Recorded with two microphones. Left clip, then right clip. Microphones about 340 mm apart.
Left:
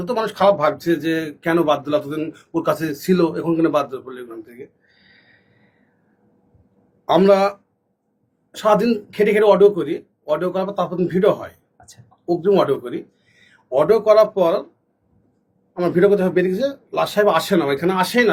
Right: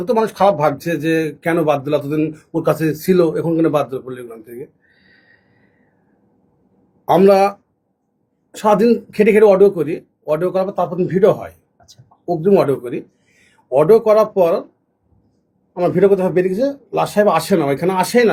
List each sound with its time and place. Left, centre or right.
0.0 s speech: right
7.1 s speech: right
8.5 s speech: right
13.7 s speech: right
15.7 s speech: right